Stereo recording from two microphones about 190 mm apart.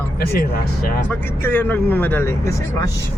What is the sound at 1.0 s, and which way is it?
Speech, 10° left (ahead or behind).